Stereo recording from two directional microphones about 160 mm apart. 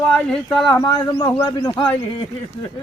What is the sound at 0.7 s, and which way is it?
Speech, 20° left (ahead or behind).